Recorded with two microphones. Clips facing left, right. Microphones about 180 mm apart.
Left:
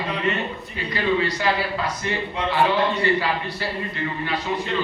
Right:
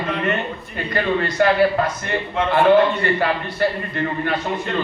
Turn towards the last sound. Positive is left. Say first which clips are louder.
# right 3 dB
turn(degrees=-50)  # may be behind; listen again after turning